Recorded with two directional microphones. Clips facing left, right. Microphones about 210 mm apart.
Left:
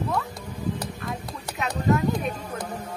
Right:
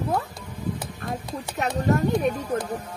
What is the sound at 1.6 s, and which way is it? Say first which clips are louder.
Speech: even; 50° right (ahead or behind).